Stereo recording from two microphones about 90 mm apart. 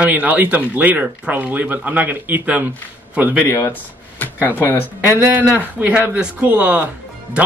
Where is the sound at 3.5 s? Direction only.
35° left (ahead or behind).